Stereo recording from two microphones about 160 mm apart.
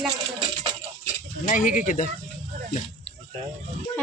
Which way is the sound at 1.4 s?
55° left (ahead or behind).